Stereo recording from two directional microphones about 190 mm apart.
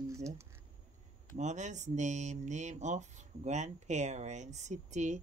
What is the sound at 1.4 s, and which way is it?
Speech, 40° right (ahead or behind).